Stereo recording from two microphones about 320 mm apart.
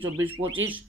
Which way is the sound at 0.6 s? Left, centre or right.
Right.